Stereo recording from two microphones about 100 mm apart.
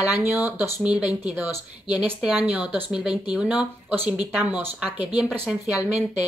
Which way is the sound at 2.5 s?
10° right (ahead or behind).